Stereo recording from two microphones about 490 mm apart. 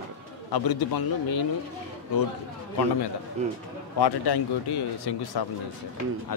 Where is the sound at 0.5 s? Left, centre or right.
Left.